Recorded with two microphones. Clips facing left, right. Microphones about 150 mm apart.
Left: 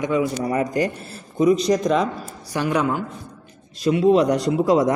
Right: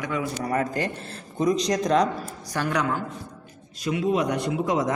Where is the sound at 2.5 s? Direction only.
15° left (ahead or behind).